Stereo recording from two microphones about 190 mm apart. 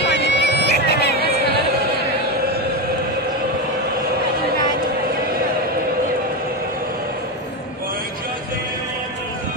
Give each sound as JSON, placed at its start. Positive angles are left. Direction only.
{"t": 0.0, "sound": "music", "side_deg": 65}